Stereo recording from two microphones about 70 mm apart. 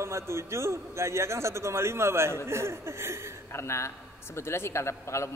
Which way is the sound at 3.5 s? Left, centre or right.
Left.